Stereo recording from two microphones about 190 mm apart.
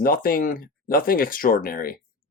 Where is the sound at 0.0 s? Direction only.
50° left (ahead or behind).